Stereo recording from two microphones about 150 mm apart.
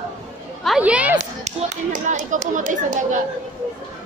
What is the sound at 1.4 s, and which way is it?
Speech, 50° right (ahead or behind).